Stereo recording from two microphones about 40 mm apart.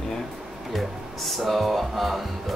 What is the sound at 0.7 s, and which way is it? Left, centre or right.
Speech, centre.